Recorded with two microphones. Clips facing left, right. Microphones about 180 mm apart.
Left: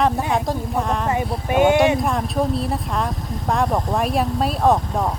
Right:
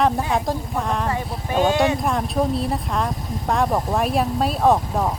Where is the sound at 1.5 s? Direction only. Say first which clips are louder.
Left 3 dB; 10° left (ahead or behind).